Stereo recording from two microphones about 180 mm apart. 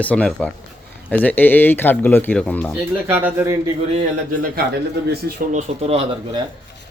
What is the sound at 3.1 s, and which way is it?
Speech, 10° right (ahead or behind).